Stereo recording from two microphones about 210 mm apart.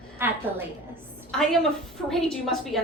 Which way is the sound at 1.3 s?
Centre (ahead or behind).